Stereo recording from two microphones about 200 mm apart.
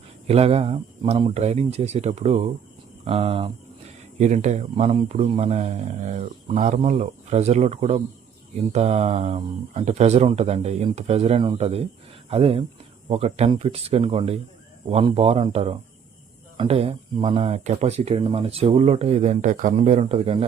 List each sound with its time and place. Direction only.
0.3 s a man's voice: 30° right (ahead or behind)